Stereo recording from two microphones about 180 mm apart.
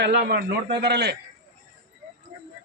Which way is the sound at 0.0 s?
60° right (ahead or behind).